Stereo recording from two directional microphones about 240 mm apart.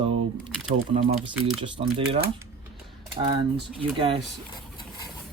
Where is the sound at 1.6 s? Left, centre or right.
Right.